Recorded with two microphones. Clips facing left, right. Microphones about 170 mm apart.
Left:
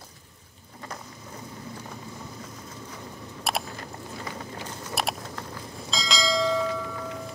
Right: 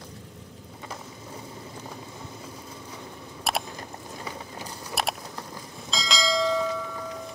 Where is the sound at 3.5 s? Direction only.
Centre (ahead or behind).